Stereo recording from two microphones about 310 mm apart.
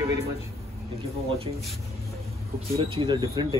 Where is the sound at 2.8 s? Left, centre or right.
Centre.